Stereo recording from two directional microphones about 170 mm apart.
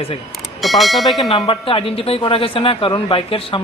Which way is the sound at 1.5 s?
30° left (ahead or behind).